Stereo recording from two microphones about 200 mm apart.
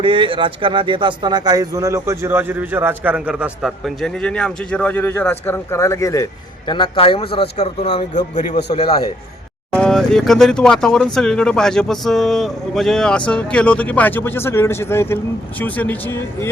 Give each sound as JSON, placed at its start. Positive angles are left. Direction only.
{"t": 0.0, "sound": "speech", "side_deg": -25}
{"t": 9.7, "sound": "speech", "side_deg": 5}